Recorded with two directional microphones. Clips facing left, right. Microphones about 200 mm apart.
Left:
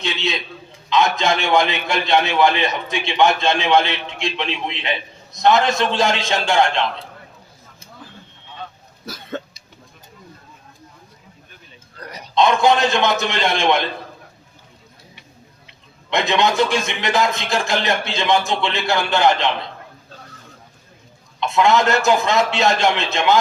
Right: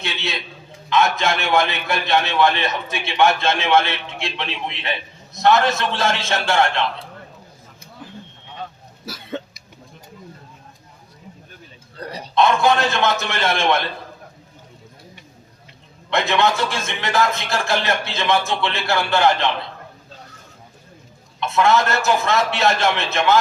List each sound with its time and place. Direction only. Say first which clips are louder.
0.0 s a man's voice: left 4 dB; 15° left (ahead or behind)
11.9 s a sound: right 5 dB; 30° right (ahead or behind)
12.3 s a man's voice: left 1 dB; 20° left (ahead or behind)
16.0 s a man's voice: even; 15° left (ahead or behind)
21.4 s a man's voice: left 1 dB; 15° left (ahead or behind)